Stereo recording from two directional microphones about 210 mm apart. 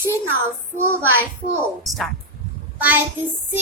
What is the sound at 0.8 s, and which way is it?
Speech, 10° right (ahead or behind).